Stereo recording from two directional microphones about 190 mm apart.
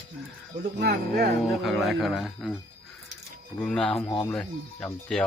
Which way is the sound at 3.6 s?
5° left (ahead or behind).